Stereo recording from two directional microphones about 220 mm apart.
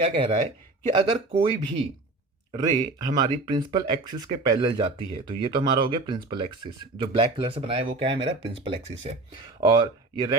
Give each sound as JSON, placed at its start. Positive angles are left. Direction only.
{"t": 0.0, "sound": "speech", "side_deg": -20}